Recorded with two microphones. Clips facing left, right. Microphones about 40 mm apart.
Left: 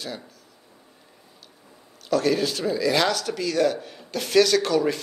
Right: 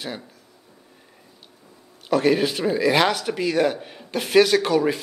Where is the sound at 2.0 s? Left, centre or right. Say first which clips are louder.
Right 3 dB; right.